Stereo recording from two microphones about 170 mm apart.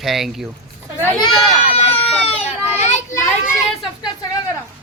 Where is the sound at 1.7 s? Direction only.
35° left (ahead or behind).